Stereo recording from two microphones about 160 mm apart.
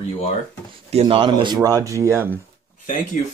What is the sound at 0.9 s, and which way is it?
Speech, 35° right (ahead or behind).